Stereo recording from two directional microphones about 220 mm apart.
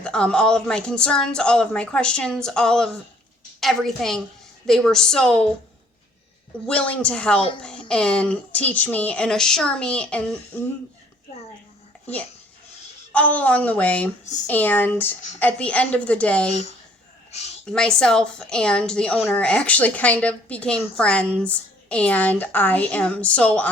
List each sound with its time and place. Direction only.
0.0 s a woman's voice: 5° left (ahead or behind)
6.7 s a woman's voice: 5° left (ahead or behind)
13.1 s a woman's voice: 5° left (ahead or behind)
16.5 s a woman's voice: 30° left (ahead or behind)
17.7 s a woman's voice: 5° left (ahead or behind)